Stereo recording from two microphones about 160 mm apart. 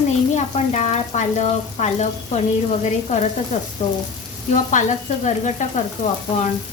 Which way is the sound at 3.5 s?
45° left (ahead or behind).